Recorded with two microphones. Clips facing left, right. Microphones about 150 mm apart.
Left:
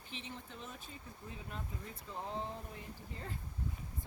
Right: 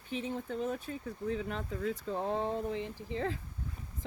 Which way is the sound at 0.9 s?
80° right.